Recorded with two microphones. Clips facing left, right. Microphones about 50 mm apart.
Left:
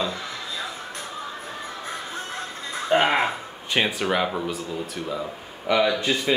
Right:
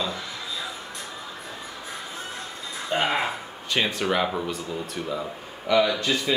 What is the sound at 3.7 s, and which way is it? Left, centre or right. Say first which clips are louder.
Speech: left 1 dB; centre.